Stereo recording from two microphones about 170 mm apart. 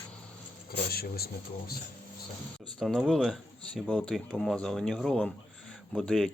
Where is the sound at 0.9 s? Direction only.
65° left (ahead or behind).